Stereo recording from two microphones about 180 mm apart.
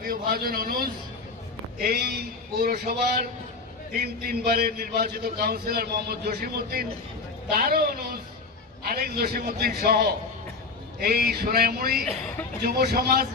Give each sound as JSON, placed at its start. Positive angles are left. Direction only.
{"t": 0.0, "sound": "a man's voice", "side_deg": -55}